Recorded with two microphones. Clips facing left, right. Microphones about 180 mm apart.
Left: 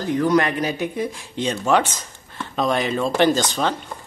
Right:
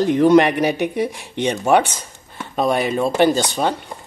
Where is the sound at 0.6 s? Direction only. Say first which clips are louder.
Right 5 dB; 70° right (ahead or behind).